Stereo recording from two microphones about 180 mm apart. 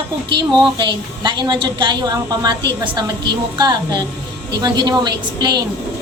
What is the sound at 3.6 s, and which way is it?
A woman's voice, 25° right (ahead or behind).